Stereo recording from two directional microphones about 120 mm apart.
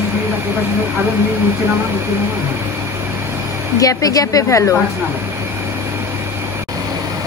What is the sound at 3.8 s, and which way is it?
Speech, 30° left (ahead or behind).